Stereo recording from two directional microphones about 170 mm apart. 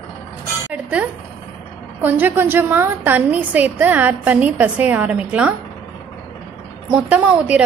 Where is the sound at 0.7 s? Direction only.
10° right (ahead or behind).